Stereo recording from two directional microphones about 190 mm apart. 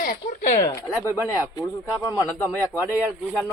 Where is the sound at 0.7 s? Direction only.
15° left (ahead or behind).